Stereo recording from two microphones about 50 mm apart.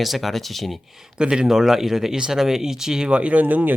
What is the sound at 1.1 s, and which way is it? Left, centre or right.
Speech, centre.